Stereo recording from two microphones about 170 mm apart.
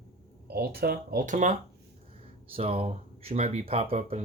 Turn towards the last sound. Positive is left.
turn(degrees=-35)  # may be behind; listen again after turning